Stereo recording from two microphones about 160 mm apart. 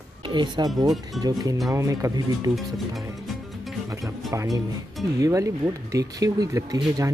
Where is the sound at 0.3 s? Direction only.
30° right (ahead or behind).